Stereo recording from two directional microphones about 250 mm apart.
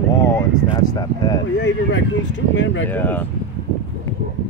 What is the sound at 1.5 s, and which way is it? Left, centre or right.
Speech, left.